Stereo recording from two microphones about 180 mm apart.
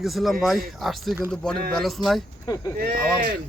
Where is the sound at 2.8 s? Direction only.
55° right (ahead or behind).